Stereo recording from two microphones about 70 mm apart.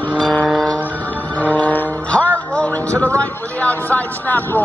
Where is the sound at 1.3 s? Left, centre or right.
Left.